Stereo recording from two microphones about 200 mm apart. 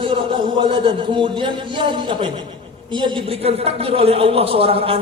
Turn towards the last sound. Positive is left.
turn(degrees=-30)  # may be behind; listen again after turning